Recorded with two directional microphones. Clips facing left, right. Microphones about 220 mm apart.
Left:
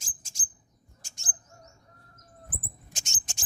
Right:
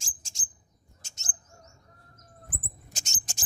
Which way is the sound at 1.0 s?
25° right (ahead or behind).